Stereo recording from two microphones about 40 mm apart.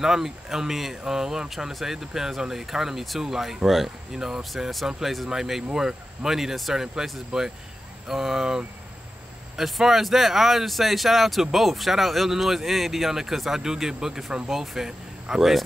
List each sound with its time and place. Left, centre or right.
0.0 s speech: centre